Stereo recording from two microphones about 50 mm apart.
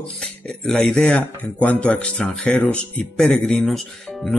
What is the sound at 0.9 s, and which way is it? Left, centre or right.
Speech, left.